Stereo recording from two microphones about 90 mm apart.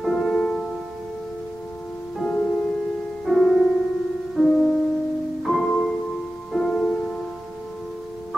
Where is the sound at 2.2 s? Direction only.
15° left (ahead or behind).